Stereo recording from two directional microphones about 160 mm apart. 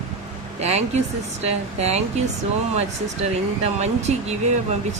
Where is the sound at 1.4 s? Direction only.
40° right (ahead or behind).